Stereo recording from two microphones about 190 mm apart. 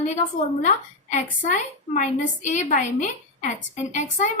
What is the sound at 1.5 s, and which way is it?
A woman's voice, 40° left (ahead or behind).